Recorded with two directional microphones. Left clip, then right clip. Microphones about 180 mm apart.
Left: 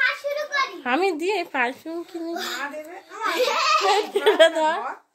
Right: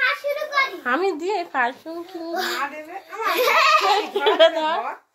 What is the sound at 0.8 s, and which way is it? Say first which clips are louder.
A child's voice: even; 50° left (ahead or behind).